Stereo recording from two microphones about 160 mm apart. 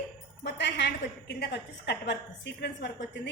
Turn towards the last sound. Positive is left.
turn(degrees=90)